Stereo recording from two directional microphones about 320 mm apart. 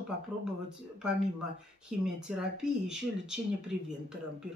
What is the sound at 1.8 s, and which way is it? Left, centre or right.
Speech, centre.